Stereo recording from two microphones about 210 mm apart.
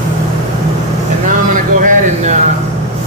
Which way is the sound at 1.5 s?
40° right (ahead or behind).